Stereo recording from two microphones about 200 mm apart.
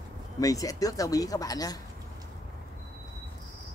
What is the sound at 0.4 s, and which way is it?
Speech, 15° left (ahead or behind).